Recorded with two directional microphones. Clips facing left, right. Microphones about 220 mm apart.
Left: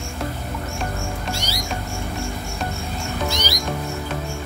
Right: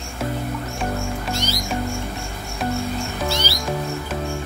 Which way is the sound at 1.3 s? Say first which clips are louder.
Right 4 dB; 10° left (ahead or behind).